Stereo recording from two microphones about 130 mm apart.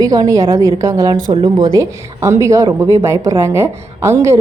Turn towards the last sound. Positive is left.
turn(degrees=-20)  # may be behind; listen again after turning